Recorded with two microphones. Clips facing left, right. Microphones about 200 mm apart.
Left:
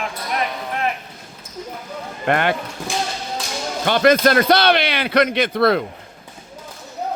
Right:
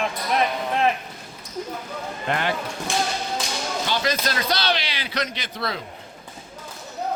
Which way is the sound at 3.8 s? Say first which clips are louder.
Left 13 dB; 60° left (ahead or behind).